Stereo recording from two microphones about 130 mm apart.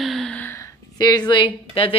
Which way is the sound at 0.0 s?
Centre (ahead or behind).